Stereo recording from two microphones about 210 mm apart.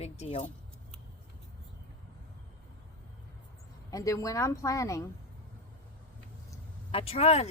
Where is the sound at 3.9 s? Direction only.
15° left (ahead or behind).